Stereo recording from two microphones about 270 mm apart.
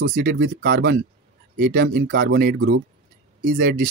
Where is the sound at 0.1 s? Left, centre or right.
Right.